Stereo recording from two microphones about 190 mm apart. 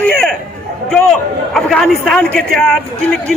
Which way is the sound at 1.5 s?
Centre (ahead or behind).